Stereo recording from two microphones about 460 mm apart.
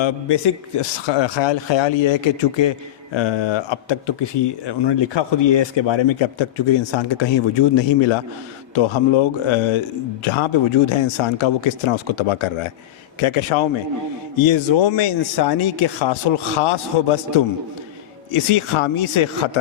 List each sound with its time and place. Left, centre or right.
0.0 s speech: left
10.2 s speech: left
14.3 s speech: left